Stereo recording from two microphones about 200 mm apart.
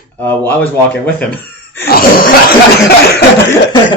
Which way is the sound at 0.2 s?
10° left (ahead or behind).